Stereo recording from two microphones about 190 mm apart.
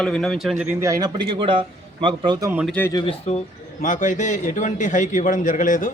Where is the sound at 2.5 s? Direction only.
5° right (ahead or behind).